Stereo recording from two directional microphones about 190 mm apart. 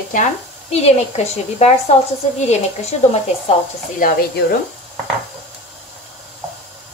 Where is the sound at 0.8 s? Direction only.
35° left (ahead or behind).